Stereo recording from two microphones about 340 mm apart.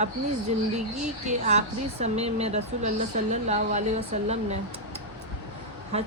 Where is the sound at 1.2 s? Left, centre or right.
Centre.